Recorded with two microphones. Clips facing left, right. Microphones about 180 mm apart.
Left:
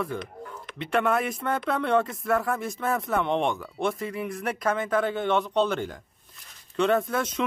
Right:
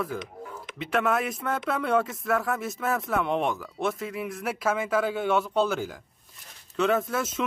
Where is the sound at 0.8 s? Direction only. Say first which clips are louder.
Left 1 dB; centre (ahead or behind).